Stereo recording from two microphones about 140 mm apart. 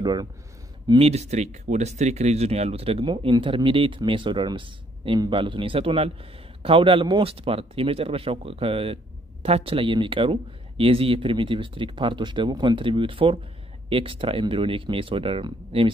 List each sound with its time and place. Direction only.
0.0 s speech: 30° right (ahead or behind)
0.8 s speech: 45° right (ahead or behind)